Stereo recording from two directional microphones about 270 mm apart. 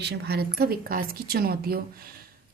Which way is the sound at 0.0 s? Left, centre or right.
Right.